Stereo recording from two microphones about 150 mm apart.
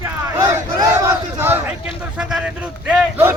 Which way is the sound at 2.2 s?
5° right (ahead or behind).